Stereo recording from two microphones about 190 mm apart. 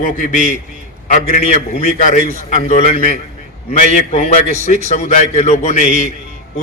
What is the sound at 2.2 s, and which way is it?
Speech, 50° right (ahead or behind).